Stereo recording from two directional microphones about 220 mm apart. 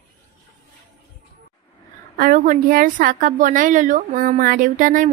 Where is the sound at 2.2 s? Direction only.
40° right (ahead or behind).